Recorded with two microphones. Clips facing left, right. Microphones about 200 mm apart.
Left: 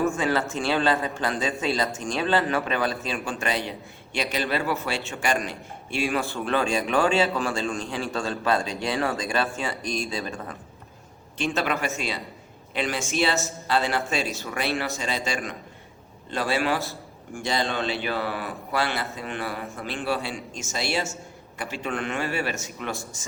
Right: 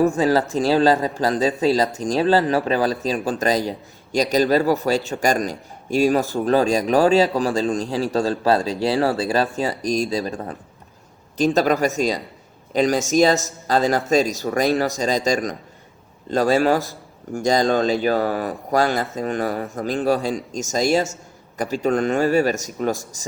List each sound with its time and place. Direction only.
0.0 s a man's voice: 35° right (ahead or behind)